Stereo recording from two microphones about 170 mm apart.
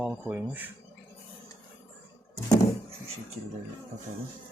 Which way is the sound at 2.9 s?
35° right (ahead or behind).